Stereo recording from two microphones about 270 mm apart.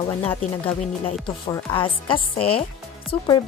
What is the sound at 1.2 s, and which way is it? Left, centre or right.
Speech, centre.